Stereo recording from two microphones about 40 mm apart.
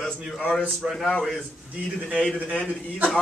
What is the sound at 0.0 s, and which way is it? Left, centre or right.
Speech, centre.